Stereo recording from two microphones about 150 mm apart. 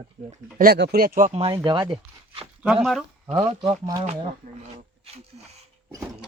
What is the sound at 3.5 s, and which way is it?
Speech, 30° right (ahead or behind).